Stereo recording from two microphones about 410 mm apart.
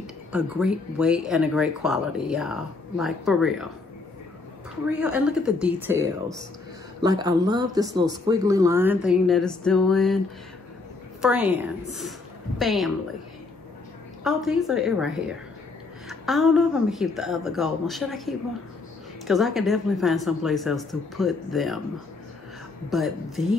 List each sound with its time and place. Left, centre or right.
0.0 s speech: centre
4.9 s speech: centre
14.2 s speech: centre
22.8 s speech: centre